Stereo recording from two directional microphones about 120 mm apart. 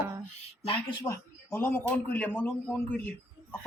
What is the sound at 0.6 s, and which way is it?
Speech, 45° left (ahead or behind).